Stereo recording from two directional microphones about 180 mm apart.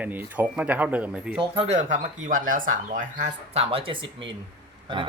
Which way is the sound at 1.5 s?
35° right (ahead or behind).